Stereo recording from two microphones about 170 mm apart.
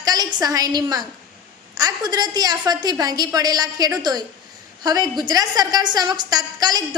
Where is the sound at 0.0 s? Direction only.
20° right (ahead or behind).